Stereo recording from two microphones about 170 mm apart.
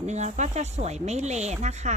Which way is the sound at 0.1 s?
45° right (ahead or behind).